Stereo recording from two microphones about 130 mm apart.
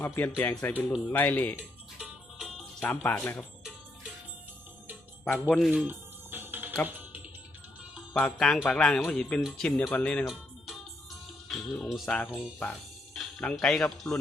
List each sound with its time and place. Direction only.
0.0 s speech: 15° left (ahead or behind)
2.0 s music: 5° right (ahead or behind)
2.8 s speech: 15° left (ahead or behind)
5.2 s speech: 10° left (ahead or behind)
5.7 s music: 15° right (ahead or behind)
8.1 s speech: 5° left (ahead or behind)
11.4 s speech: centre (ahead or behind)